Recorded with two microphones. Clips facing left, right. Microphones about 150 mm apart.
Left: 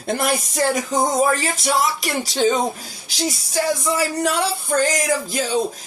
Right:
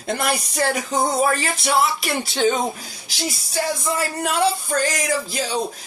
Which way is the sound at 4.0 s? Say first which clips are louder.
Left 3 dB; 80° left.